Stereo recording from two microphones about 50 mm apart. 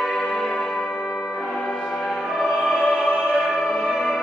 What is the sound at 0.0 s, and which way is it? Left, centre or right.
Music, centre.